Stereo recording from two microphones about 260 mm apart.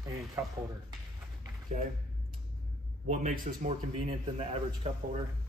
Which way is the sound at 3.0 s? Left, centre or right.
Right.